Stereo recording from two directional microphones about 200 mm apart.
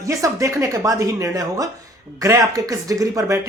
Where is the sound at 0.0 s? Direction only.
15° right (ahead or behind).